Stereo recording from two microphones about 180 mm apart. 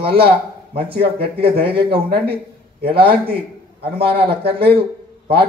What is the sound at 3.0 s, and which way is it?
Speech, 30° right (ahead or behind).